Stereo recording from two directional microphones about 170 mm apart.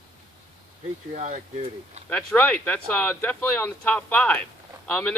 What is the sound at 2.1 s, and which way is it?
Speech, 10° left (ahead or behind).